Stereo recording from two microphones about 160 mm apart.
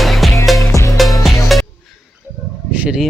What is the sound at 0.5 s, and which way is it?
Music, 20° left (ahead or behind).